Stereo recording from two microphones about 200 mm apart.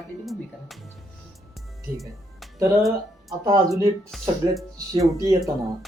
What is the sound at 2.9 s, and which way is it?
Speech, 15° right (ahead or behind).